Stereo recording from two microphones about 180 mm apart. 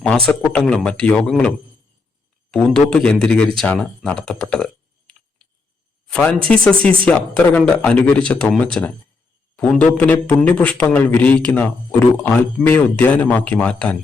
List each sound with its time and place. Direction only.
0.3 s speech: 5° left (ahead or behind)
2.5 s speech: 5° left (ahead or behind)
10.0 s speech: 10° left (ahead or behind)